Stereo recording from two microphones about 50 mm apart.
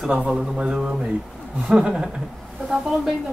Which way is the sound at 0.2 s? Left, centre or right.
Centre.